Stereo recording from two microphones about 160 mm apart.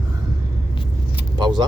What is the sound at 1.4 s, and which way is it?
Speech, 25° right (ahead or behind).